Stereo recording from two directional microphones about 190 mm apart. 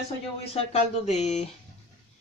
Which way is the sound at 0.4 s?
30° left (ahead or behind).